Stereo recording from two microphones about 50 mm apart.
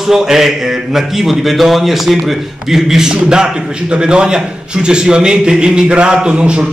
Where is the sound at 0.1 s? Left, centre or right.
Centre.